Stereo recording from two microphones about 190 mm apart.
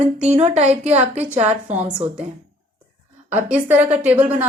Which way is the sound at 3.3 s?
10° right (ahead or behind).